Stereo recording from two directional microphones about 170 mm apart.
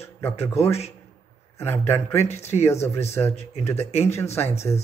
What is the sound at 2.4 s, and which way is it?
A man's voice, 40° left (ahead or behind).